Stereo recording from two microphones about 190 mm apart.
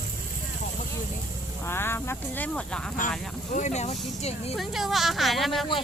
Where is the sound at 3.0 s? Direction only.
45° left (ahead or behind).